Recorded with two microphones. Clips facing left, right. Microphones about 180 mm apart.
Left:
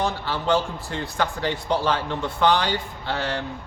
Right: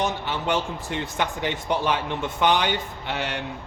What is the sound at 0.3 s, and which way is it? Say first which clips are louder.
A man's voice: left 3 dB; 20° right (ahead or behind).